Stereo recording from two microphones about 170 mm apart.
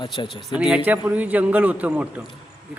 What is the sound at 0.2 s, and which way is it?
Speech, 25° left (ahead or behind).